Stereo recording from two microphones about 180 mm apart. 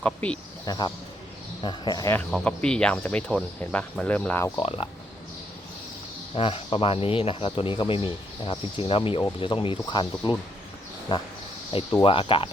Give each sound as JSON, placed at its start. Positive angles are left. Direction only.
{"t": 0.0, "sound": "speech", "side_deg": 5}
{"t": 0.6, "sound": "a man's voice", "side_deg": 20}
{"t": 2.1, "sound": "speech", "side_deg": 5}
{"t": 4.5, "sound": "speech", "side_deg": 30}
{"t": 6.3, "sound": "speech", "side_deg": 30}
{"t": 11.7, "sound": "speech", "side_deg": 30}